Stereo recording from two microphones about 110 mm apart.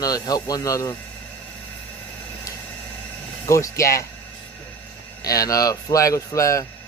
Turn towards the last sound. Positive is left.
turn(degrees=30)  # may be behind; listen again after turning